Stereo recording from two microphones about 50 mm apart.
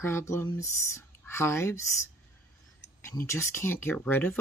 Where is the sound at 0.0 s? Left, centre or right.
Left.